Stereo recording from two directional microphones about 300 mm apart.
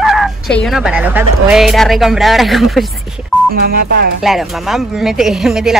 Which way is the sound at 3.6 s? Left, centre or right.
Right.